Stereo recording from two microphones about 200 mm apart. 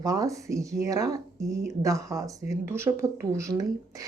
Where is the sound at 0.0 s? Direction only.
15° right (ahead or behind).